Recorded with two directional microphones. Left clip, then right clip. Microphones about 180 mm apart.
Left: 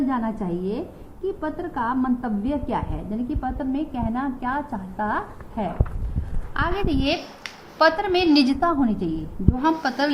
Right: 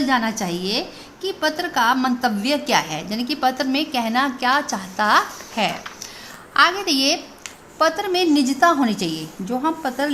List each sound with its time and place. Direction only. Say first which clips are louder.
0.1 s a woman's voice: right 6 dB; 50° right (ahead or behind)
6.5 s a woman's voice: right 8 dB; 55° right (ahead or behind)
7.8 s a woman's voice: even; 40° right (ahead or behind)